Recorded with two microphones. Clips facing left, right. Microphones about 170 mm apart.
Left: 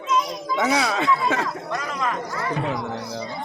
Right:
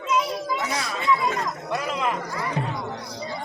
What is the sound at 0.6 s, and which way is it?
Speech, 70° left (ahead or behind).